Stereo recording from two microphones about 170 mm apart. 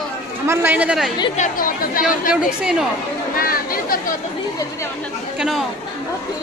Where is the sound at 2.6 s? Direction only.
5° right (ahead or behind).